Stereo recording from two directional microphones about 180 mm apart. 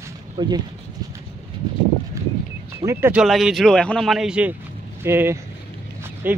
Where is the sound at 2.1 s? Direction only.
15° right (ahead or behind).